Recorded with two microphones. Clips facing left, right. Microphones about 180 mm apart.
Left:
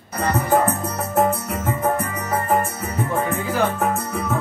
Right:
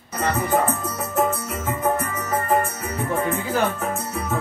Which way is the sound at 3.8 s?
60° left (ahead or behind).